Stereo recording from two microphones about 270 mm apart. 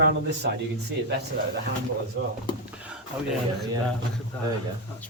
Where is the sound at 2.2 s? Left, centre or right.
Right.